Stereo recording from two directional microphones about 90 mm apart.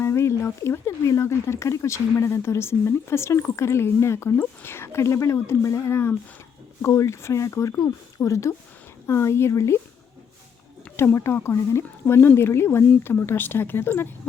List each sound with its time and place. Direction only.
0.0 s speech: 30° left (ahead or behind)
10.9 s speech: 30° left (ahead or behind)